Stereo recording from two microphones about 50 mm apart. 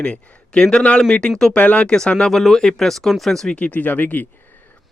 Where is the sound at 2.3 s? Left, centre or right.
Centre.